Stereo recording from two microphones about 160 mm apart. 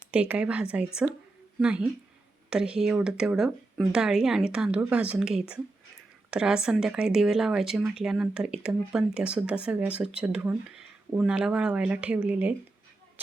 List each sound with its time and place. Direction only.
0.1 s speech: 5° right (ahead or behind)